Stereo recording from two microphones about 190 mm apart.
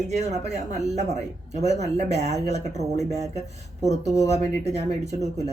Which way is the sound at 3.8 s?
35° right (ahead or behind).